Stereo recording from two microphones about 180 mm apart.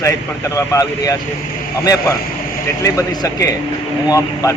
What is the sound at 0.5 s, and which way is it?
Speech, 20° left (ahead or behind).